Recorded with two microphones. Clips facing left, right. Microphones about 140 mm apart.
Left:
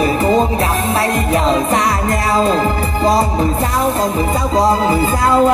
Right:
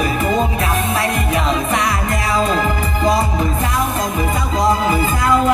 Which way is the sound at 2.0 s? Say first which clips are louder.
Left 3 dB; 35° left (ahead or behind).